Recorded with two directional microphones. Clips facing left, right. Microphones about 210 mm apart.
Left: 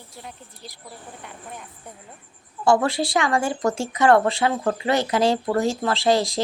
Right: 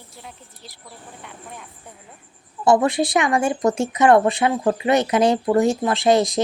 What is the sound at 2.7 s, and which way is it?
Speech, 20° right (ahead or behind).